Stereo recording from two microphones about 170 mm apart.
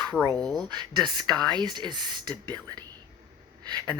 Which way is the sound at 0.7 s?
25° right (ahead or behind).